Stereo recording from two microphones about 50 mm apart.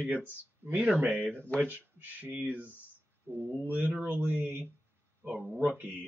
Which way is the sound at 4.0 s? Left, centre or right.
Right.